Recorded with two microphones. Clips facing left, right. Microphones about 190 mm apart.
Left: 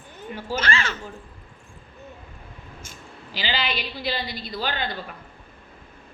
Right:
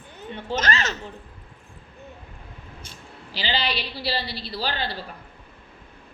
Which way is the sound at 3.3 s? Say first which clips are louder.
Right 1 dB; 40° right (ahead or behind).